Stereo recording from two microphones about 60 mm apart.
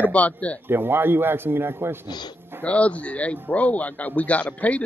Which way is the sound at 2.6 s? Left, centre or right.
Left.